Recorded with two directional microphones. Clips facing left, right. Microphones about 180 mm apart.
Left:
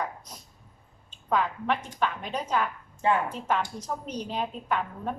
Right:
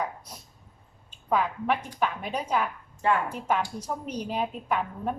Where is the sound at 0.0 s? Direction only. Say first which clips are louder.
Right 1 dB; 10° right (ahead or behind).